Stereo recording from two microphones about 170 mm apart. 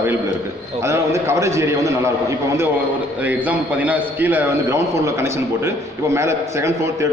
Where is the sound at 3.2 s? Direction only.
10° right (ahead or behind).